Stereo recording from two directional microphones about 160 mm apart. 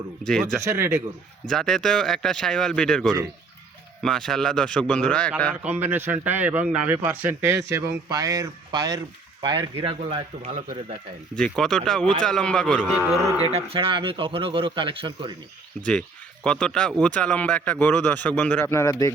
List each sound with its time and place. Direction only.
0.2 s speech: 5° left (ahead or behind)
0.6 s a man's voice: 15° right (ahead or behind)
1.5 s speech: 5° left (ahead or behind)
5.6 s a man's voice: 10° right (ahead or behind); by 10.5 s 40° right (ahead or behind)
11.3 s speech: centre (ahead or behind)
13.5 s speech: 40° right (ahead or behind)
15.9 s a man's voice: 5° left (ahead or behind)